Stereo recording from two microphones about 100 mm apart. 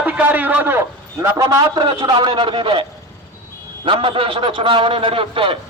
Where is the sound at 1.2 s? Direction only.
35° right (ahead or behind); by 2.8 s 60° right (ahead or behind).